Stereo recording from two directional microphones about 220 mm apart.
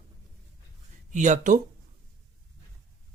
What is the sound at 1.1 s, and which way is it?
Speech, 35° right (ahead or behind).